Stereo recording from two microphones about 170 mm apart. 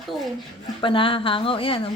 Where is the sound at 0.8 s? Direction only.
30° left (ahead or behind).